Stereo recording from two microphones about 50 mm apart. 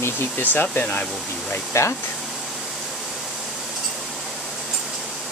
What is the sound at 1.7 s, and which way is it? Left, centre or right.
Speech, left.